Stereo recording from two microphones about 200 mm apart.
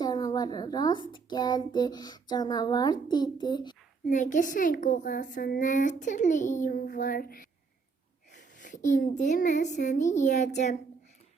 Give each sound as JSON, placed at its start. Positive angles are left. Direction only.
{"t": 0.0, "sound": "a sound", "side_deg": 20}
{"t": 1.1, "sound": "a child's voice", "side_deg": 20}
{"t": 4.0, "sound": "a child's voice", "side_deg": 40}